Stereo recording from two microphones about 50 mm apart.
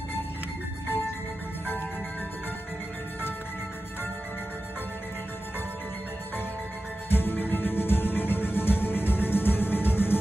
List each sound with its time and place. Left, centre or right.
7.1 s music: left